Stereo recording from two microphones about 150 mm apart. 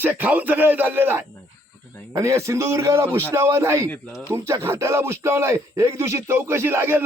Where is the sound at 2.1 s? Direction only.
20° right (ahead or behind).